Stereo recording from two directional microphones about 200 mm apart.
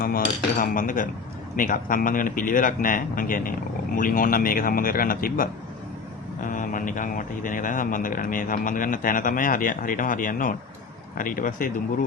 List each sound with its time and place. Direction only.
0.6 s a man's voice: 40° left (ahead or behind)